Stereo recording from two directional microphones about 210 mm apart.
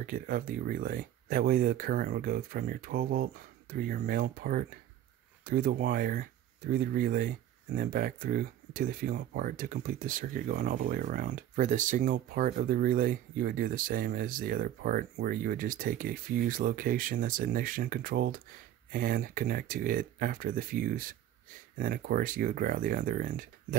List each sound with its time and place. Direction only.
0.0 s speech: 40° right (ahead or behind)